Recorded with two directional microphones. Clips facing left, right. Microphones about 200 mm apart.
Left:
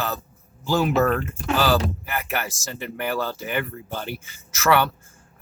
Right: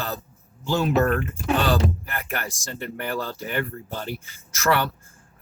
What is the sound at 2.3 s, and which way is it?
Speech, 5° left (ahead or behind).